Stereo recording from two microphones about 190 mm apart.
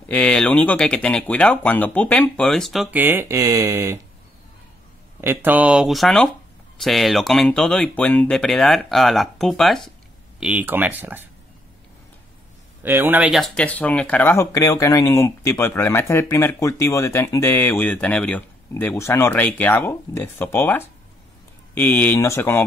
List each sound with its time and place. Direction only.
0.1 s speech: 5° left (ahead or behind); by 4.0 s 15° right (ahead or behind)
5.2 s speech: 10° right (ahead or behind)
12.8 s speech: 10° right (ahead or behind); by 22.6 s 15° left (ahead or behind)